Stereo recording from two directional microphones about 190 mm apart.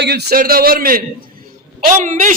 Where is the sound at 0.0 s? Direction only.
60° right (ahead or behind).